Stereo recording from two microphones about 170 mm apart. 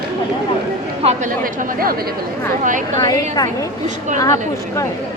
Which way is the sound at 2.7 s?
50° right (ahead or behind).